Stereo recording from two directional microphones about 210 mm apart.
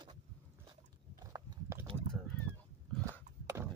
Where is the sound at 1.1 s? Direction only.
15° right (ahead or behind).